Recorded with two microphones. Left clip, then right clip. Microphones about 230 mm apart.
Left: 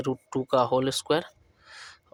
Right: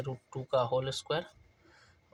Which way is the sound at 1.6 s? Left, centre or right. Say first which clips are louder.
Left 16 dB; left.